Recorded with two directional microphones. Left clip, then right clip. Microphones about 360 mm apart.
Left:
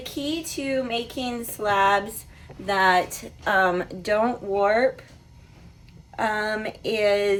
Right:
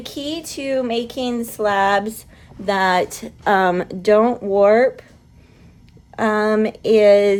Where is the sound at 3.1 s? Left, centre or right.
Right.